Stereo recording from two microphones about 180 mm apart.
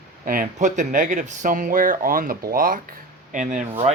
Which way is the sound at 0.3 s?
45° right (ahead or behind).